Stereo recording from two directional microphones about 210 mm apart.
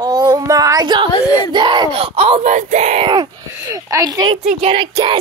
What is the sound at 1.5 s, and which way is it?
Speech, 20° right (ahead or behind).